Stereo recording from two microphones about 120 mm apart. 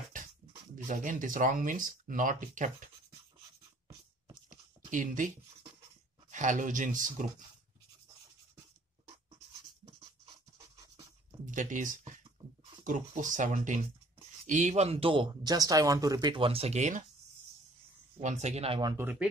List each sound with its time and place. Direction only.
0.7 s speech: 90° right
4.5 s a sound: 90° right
6.3 s speech: 90° right
11.5 s speech: 90° right; by 17.0 s 75° right (ahead or behind)
18.2 s speech: 75° right (ahead or behind)